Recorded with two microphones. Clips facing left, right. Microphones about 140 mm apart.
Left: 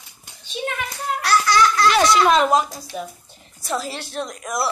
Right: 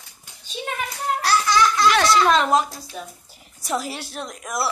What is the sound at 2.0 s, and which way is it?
A child's voice, 10° left (ahead or behind).